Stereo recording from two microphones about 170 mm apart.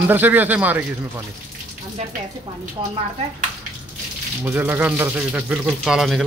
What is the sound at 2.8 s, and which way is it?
Speech, 25° right (ahead or behind).